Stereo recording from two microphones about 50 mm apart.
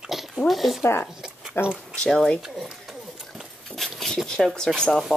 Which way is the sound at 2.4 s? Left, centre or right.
Centre.